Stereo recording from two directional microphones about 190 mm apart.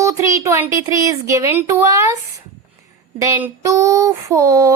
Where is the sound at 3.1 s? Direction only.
15° right (ahead or behind).